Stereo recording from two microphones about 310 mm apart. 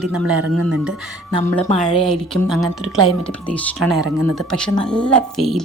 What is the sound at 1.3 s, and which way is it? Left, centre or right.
A man's voice, centre.